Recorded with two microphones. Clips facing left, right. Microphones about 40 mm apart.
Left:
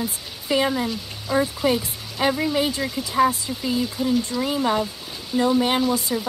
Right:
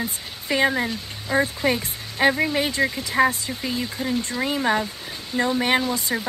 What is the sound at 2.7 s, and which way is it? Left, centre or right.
Speech, right.